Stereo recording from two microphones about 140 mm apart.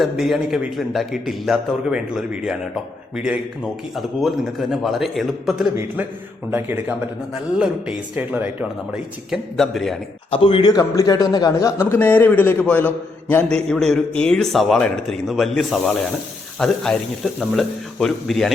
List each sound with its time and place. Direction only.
0.0 s a man's voice: centre (ahead or behind)
6.5 s speech: 15° right (ahead or behind)
9.3 s a man's voice: centre (ahead or behind)
10.3 s a man's voice: 40° left (ahead or behind)
10.7 s a man's voice: 25° left (ahead or behind); by 18.5 s centre (ahead or behind)